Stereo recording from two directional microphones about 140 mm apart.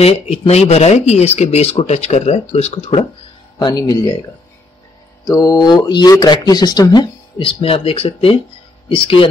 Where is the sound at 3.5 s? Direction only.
25° left (ahead or behind).